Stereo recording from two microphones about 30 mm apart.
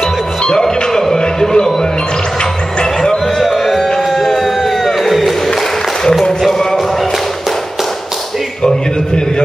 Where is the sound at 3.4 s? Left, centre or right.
Centre.